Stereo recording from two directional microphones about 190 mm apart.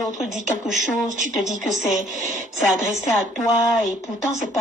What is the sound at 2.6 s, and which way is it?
Speech, centre (ahead or behind).